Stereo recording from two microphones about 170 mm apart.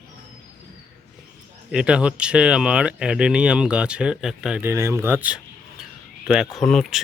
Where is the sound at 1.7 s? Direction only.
5° right (ahead or behind).